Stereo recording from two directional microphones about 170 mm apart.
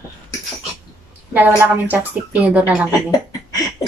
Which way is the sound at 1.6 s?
10° right (ahead or behind).